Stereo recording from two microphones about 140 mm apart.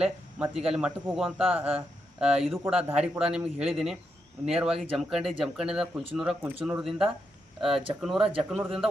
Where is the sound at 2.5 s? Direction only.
5° right (ahead or behind).